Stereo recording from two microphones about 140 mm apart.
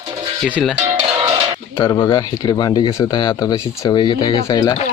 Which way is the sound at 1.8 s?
20° left (ahead or behind).